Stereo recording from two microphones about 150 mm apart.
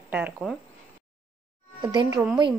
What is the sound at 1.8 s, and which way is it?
Speech, 30° right (ahead or behind).